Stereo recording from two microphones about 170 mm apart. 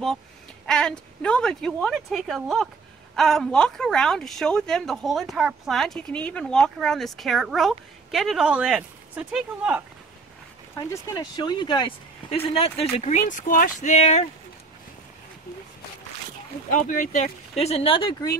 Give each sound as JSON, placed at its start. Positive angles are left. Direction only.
{"t": 0.7, "sound": "speech", "side_deg": 5}
{"t": 10.9, "sound": "speech", "side_deg": 20}
{"t": 16.7, "sound": "speech", "side_deg": 50}